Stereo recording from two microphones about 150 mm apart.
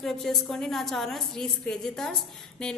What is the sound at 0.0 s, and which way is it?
A woman's voice, centre (ahead or behind).